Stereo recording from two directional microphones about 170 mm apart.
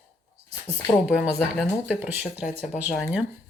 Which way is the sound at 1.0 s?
5° right (ahead or behind).